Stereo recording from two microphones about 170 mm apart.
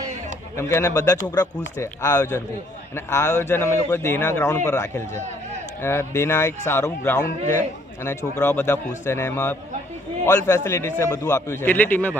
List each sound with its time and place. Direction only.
0.5 s speech: 15° left (ahead or behind)
5.1 s a sound: 40° right (ahead or behind)
5.8 s speech: 15° left (ahead or behind)